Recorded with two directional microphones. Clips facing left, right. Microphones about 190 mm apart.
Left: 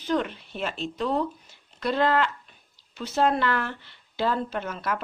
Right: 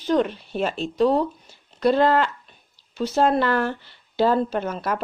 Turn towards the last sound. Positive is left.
turn(degrees=-40)  # may be behind; listen again after turning